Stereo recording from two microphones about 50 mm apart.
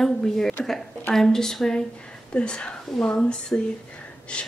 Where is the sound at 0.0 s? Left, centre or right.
Centre.